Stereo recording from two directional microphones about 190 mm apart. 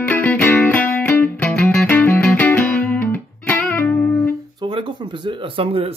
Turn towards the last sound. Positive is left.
turn(degrees=-30)  # may be behind; listen again after turning